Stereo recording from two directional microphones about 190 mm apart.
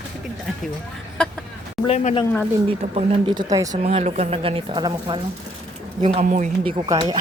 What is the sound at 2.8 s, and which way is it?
Speech, 35° right (ahead or behind).